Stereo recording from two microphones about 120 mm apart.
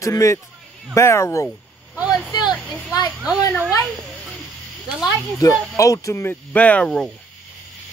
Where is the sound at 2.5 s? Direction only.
5° left (ahead or behind).